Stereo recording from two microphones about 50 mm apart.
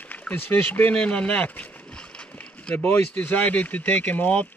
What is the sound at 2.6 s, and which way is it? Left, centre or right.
Speech, left.